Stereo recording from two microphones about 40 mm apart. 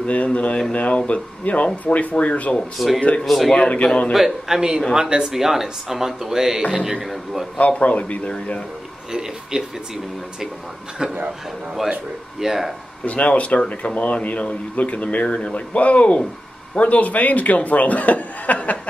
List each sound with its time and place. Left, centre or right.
0.0 s speech: left
2.8 s a man's voice: centre
3.8 s a man's voice: left
4.1 s a man's voice: centre
4.6 s a man's voice: centre
7.5 s speech: left
9.1 s speech: centre
11.0 s a man's voice: centre
12.4 s speech: centre
13.0 s speech: left